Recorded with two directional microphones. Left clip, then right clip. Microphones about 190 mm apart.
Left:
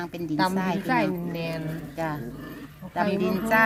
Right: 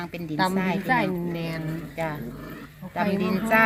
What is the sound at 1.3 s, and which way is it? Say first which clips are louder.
Speech: left 1 dB; 15° right (ahead or behind).